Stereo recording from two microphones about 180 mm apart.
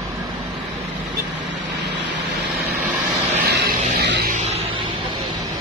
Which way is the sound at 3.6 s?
65° right (ahead or behind).